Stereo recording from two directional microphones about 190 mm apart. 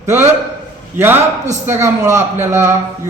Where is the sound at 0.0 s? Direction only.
15° right (ahead or behind).